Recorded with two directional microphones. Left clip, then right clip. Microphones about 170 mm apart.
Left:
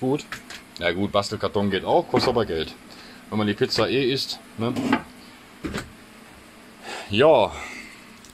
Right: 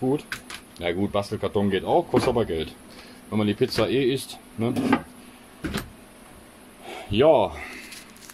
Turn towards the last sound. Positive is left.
turn(degrees=-5)  # may be behind; listen again after turning